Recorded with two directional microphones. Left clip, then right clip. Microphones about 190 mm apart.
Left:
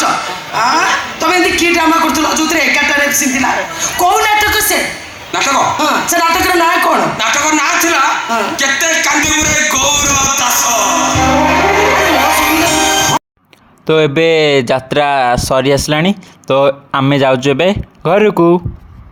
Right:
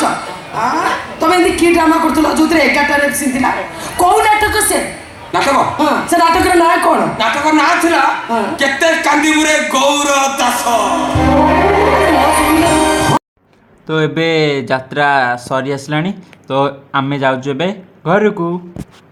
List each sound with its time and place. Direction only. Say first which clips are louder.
0.5 s a woman's voice: left 3 dB; 20° right (ahead or behind)
13.8 s speech: left 5 dB; 40° left (ahead or behind)